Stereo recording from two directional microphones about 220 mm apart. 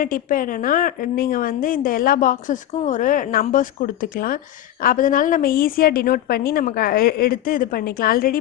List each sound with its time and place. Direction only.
0.0 s a woman's voice: 40° left (ahead or behind)